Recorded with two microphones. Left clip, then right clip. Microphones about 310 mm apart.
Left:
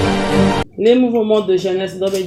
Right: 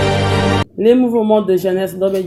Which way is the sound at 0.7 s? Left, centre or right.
Right.